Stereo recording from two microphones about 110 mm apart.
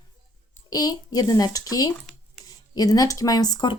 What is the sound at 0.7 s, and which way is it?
Speech, 35° left (ahead or behind).